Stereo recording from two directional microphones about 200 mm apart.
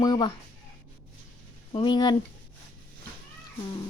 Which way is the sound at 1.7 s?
25° left (ahead or behind).